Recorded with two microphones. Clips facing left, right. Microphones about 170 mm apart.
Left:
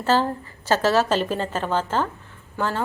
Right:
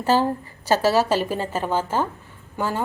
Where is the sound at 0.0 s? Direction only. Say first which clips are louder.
Right 1 dB; 15° right (ahead or behind).